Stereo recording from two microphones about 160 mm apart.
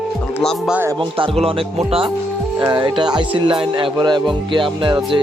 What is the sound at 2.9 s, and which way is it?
Music, 30° right (ahead or behind).